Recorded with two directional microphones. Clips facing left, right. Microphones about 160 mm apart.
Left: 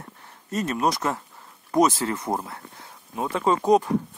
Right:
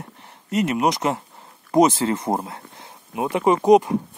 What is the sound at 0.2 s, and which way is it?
Speech, 15° right (ahead or behind).